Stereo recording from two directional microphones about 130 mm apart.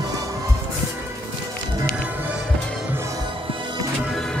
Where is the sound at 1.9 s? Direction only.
10° right (ahead or behind).